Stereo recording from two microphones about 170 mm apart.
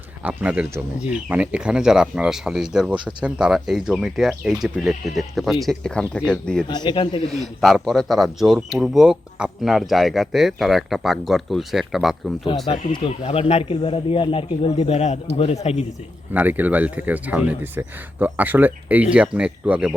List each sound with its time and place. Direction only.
0.2 s speech: 10° right (ahead or behind)
6.7 s a man's voice: 25° left (ahead or behind)
7.3 s speech: centre (ahead or behind)
12.9 s speech: 30° left (ahead or behind)
16.3 s speech: 10° right (ahead or behind)